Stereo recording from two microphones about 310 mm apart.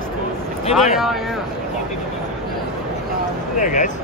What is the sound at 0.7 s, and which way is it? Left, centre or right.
Speech, centre.